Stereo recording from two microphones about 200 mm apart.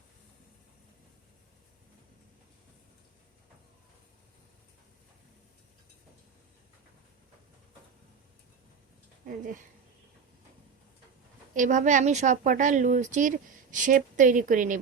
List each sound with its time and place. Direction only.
9.2 s speech: 40° right (ahead or behind)
11.5 s a woman's voice: 40° right (ahead or behind)